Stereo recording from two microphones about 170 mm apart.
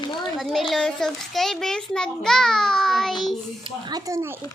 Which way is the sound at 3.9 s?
20° right (ahead or behind).